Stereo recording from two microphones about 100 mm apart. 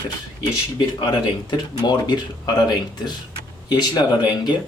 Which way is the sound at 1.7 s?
45° left (ahead or behind).